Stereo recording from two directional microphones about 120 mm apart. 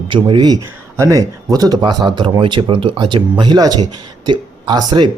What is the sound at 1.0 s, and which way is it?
Speech, 30° right (ahead or behind).